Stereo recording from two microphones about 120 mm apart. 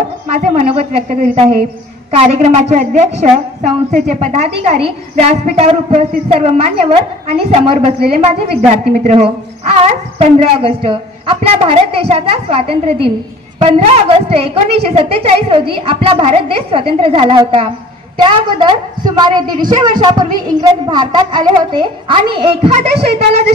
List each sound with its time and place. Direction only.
0.6 s a woman's voice: 60° right (ahead or behind)